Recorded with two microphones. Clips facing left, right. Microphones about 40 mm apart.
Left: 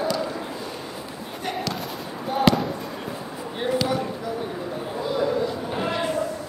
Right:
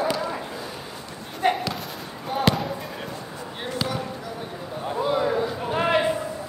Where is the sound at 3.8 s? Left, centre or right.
Centre.